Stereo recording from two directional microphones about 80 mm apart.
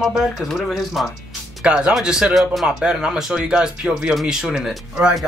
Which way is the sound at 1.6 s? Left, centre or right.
Centre.